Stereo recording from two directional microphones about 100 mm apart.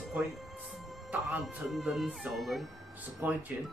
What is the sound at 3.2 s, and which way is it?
Speech, 20° right (ahead or behind).